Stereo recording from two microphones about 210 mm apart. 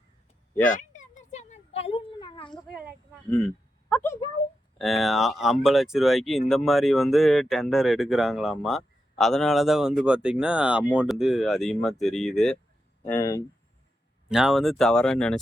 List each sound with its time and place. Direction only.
1.3 s a sound: 35° left (ahead or behind)
4.0 s speech: 15° left (ahead or behind)
4.8 s speech: centre (ahead or behind)
13.1 s speech: 15° left (ahead or behind)
14.3 s speech: 5° right (ahead or behind)